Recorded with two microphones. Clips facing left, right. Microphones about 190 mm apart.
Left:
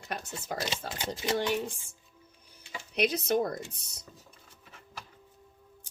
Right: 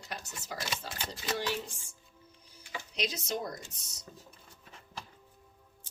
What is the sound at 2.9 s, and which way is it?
Speech, 60° left (ahead or behind).